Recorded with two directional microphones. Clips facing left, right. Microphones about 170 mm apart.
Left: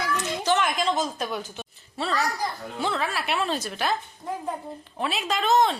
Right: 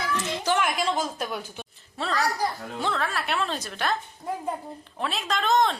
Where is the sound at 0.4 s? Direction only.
10° right (ahead or behind).